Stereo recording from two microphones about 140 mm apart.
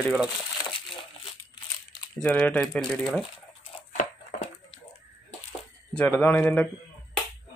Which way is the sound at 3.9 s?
55° left (ahead or behind).